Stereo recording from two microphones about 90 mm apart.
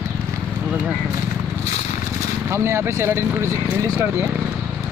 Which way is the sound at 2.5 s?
30° right (ahead or behind).